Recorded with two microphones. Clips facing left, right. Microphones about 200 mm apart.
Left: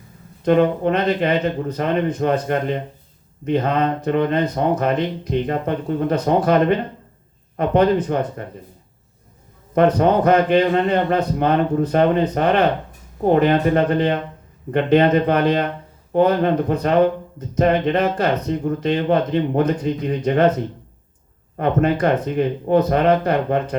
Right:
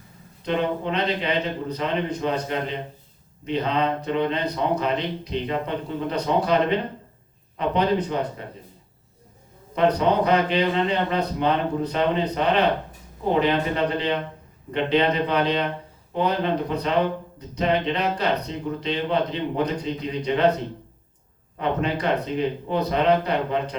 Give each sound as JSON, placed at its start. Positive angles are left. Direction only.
{"t": 0.4, "sound": "speech", "side_deg": 50}
{"t": 9.7, "sound": "speech", "side_deg": 50}
{"t": 21.6, "sound": "speech", "side_deg": 50}